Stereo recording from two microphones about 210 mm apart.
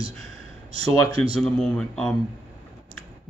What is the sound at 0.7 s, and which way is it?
Speech, 25° right (ahead or behind).